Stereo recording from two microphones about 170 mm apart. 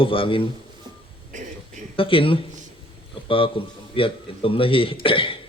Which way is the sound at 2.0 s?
30° left (ahead or behind).